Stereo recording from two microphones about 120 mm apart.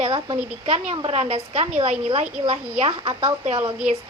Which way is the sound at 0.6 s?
60° right (ahead or behind).